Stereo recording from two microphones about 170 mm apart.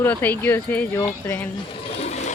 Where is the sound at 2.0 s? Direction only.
40° left (ahead or behind).